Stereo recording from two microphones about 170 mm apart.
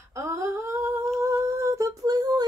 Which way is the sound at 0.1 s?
15° right (ahead or behind).